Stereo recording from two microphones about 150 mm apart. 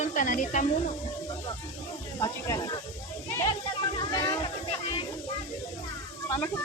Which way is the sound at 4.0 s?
25° left (ahead or behind).